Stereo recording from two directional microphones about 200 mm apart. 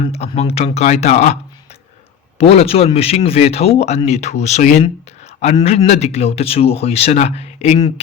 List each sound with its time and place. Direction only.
0.1 s a man's voice: 30° left (ahead or behind)
2.4 s a man's voice: 30° left (ahead or behind)